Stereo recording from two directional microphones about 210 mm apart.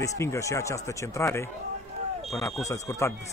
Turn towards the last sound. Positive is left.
turn(degrees=15)  # may be behind; listen again after turning